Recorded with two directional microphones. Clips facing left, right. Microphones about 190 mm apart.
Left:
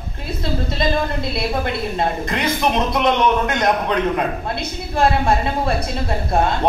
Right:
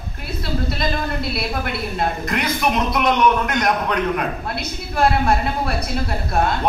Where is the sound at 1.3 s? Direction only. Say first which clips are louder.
Left 3 dB; 20° left (ahead or behind).